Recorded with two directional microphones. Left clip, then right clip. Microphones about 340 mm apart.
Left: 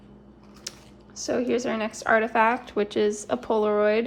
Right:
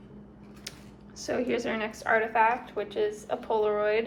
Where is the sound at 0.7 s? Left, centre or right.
Centre.